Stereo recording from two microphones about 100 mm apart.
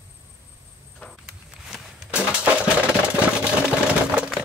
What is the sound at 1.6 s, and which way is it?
Walk, 5° right (ahead or behind).